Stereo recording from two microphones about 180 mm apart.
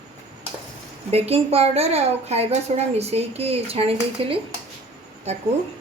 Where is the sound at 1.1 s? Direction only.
35° right (ahead or behind).